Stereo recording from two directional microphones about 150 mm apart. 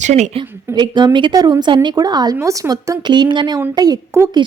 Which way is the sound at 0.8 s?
30° right (ahead or behind).